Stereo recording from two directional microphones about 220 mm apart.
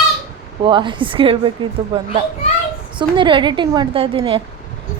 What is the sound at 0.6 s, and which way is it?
Speech, 20° right (ahead or behind).